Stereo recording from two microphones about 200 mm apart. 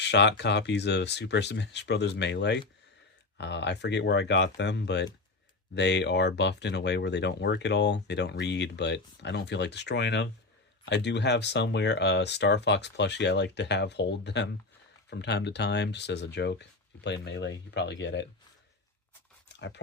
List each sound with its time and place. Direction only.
0.0 s speech: 60° left (ahead or behind)
19.5 s speech: 60° left (ahead or behind)